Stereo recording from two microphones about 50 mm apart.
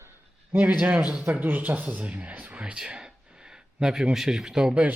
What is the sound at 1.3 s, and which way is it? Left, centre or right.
Speech, right.